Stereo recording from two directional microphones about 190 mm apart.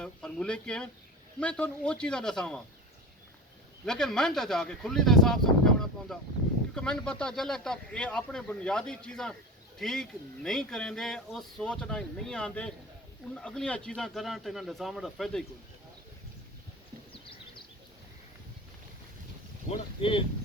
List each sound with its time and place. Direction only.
0.0 s speech: 5° left (ahead or behind)
3.8 s speech: 5° left (ahead or behind)
19.7 s speech: 30° left (ahead or behind)